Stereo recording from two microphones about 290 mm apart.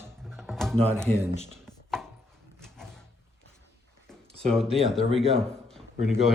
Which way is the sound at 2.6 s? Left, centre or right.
Centre.